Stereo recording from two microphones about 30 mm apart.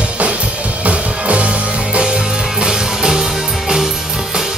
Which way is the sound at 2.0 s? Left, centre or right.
Right.